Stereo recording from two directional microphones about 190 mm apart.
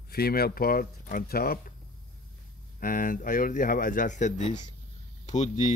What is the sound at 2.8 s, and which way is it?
A man's voice, 45° left (ahead or behind).